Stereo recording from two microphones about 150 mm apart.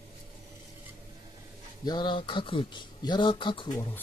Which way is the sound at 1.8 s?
30° left (ahead or behind).